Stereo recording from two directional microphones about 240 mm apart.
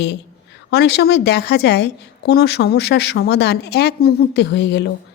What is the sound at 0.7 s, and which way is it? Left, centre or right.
A woman's voice, left.